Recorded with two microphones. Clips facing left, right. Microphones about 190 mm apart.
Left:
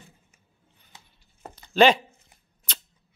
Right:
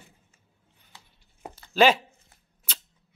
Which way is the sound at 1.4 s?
5° right (ahead or behind).